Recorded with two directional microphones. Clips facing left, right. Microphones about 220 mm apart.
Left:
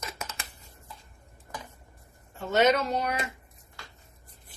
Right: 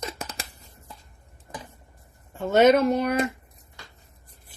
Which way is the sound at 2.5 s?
50° right (ahead or behind).